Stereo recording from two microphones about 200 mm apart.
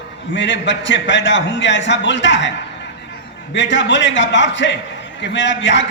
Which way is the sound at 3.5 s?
65° left (ahead or behind).